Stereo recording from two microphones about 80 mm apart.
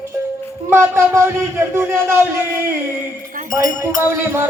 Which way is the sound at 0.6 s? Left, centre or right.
Right.